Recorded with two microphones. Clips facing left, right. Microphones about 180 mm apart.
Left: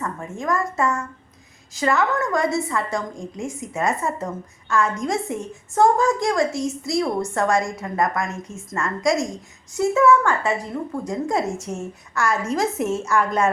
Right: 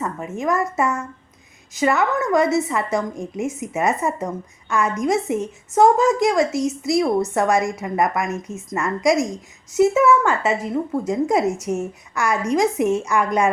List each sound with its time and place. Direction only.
0.0 s a woman's voice: 20° right (ahead or behind)